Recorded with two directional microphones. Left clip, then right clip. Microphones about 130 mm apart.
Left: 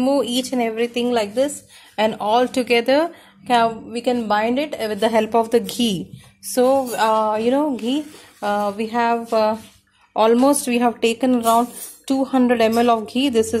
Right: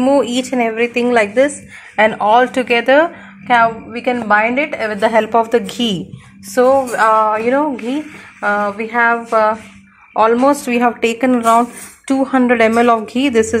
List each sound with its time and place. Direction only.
0.0 s speech: 25° left (ahead or behind)
1.0 s a woman's voice: 20° left (ahead or behind)
2.0 s speech: 35° left (ahead or behind); by 7.2 s 55° left (ahead or behind)
7.2 s a sound: 65° left (ahead or behind)
10.1 s speech: 70° left (ahead or behind); by 10.9 s 55° left (ahead or behind)
11.0 s speech: 40° left (ahead or behind)